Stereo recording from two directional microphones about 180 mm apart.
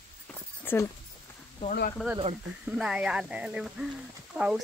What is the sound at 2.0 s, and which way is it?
Speech, 5° left (ahead or behind).